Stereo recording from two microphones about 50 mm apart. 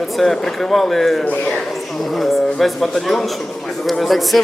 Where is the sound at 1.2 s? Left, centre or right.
Left.